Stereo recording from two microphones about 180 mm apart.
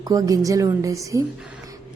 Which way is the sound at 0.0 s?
20° right (ahead or behind).